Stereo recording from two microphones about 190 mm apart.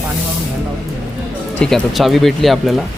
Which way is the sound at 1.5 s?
Centre (ahead or behind).